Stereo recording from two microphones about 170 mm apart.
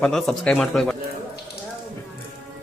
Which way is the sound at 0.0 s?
Centre (ahead or behind).